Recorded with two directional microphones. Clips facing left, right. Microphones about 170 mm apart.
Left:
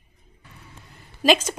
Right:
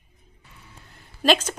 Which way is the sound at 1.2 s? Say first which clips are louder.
Left 1 dB; 10° left (ahead or behind).